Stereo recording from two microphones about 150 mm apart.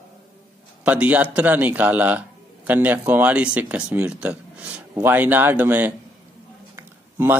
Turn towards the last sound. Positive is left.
turn(degrees=-15)  # may be behind; listen again after turning